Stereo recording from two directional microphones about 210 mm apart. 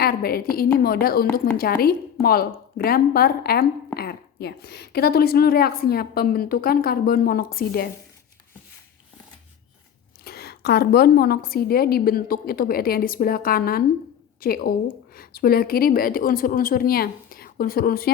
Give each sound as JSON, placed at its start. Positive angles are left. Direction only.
{"t": 0.0, "sound": "a woman's voice", "side_deg": 45}
{"t": 10.2, "sound": "a woman's voice", "side_deg": 50}